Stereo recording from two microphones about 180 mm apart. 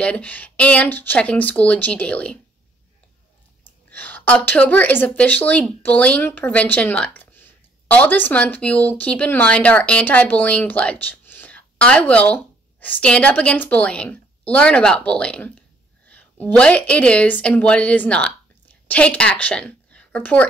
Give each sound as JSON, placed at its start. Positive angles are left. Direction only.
{"t": 0.0, "sound": "speech", "side_deg": 5}
{"t": 3.9, "sound": "speech", "side_deg": 10}
{"t": 16.1, "sound": "a sound", "side_deg": 10}
{"t": 16.5, "sound": "a woman's voice", "side_deg": 5}